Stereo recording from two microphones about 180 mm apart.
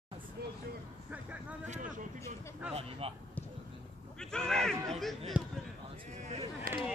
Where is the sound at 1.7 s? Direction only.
45° right (ahead or behind).